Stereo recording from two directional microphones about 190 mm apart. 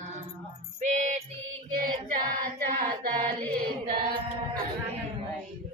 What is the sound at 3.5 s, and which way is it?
Chant, 45° right (ahead or behind).